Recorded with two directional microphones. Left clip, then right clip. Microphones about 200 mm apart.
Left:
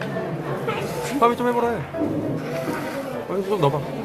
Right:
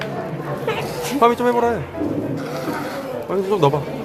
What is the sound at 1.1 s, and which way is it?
Speech, 15° right (ahead or behind).